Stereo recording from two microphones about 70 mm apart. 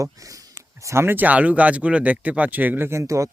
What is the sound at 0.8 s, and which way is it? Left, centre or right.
Speech, right.